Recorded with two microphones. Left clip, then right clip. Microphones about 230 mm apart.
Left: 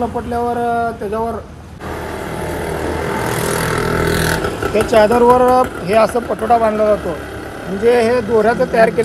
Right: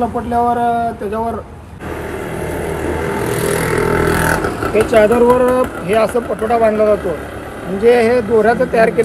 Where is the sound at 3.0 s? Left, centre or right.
Left.